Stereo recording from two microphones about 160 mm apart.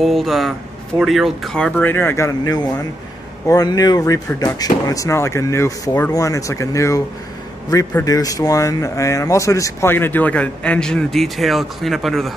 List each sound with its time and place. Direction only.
0.0 s speech: centre (ahead or behind); by 7.0 s 20° left (ahead or behind)
8.0 s speech: 20° left (ahead or behind); by 12.4 s centre (ahead or behind)